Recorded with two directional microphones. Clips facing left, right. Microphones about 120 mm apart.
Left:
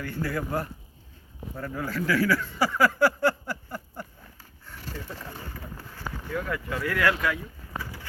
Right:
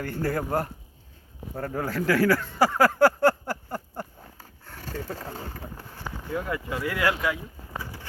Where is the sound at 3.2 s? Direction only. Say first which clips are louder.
Right 4 dB; 55° right (ahead or behind); by 5.6 s 35° right (ahead or behind).